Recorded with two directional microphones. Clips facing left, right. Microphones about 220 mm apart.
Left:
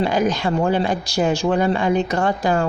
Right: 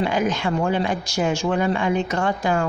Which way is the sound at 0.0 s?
35° left (ahead or behind).